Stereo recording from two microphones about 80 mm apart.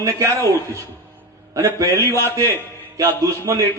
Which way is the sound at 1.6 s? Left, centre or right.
Right.